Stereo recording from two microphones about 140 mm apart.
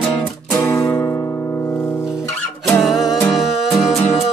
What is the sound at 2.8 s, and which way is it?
Music, centre (ahead or behind).